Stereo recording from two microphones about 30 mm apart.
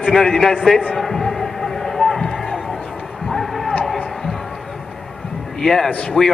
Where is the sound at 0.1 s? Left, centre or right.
Centre.